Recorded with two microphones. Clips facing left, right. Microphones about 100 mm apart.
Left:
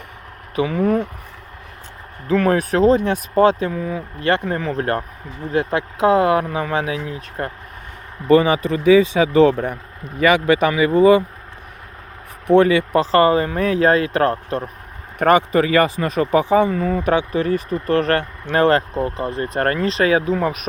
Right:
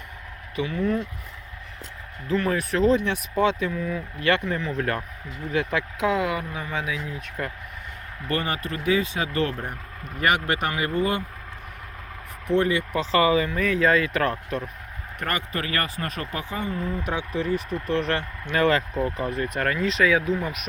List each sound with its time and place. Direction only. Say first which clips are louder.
0.5 s speech: left 7 dB; 55° left (ahead or behind)
2.2 s speech: left 7 dB; 60° left (ahead or behind); by 6.3 s 40° left (ahead or behind)
6.3 s speech: left 10 dB; 70° left (ahead or behind)
7.2 s speech: left 5 dB; 35° left (ahead or behind)
8.4 s speech: left 11 dB; 90° left
12.5 s speech: left 9 dB; 70° left (ahead or behind)
13.0 s speech: left 5 dB; 45° left (ahead or behind)
15.2 s speech: left 14 dB; 80° left; by 18.3 s 55° left (ahead or behind)
18.4 s speech: left 6 dB; 40° left (ahead or behind)
19.4 s speech: left 7 dB; 45° left (ahead or behind)